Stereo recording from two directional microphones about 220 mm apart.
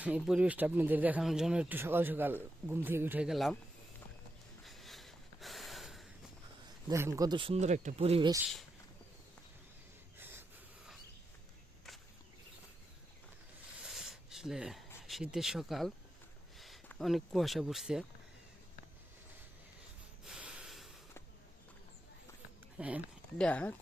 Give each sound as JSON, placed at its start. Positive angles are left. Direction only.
{"t": 0.2, "sound": "speech", "side_deg": -5}
{"t": 4.6, "sound": "snort", "side_deg": 0}
{"t": 6.8, "sound": "speech", "side_deg": -15}
{"t": 10.2, "sound": "a sound", "side_deg": -10}
{"t": 13.7, "sound": "a sound", "side_deg": 0}
{"t": 16.6, "sound": "speech", "side_deg": 0}
{"t": 20.2, "sound": "snort", "side_deg": -5}
{"t": 22.8, "sound": "speech", "side_deg": -5}
{"t": 23.4, "sound": "speech", "side_deg": 5}